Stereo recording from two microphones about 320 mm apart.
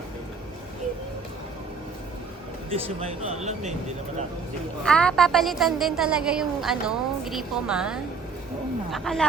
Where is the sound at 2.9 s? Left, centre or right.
Right.